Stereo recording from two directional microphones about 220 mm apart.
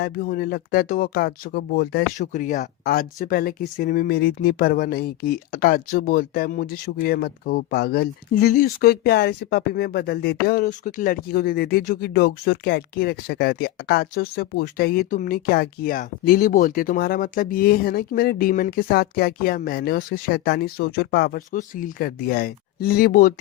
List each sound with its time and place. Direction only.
0.0 s speech: 45° left (ahead or behind)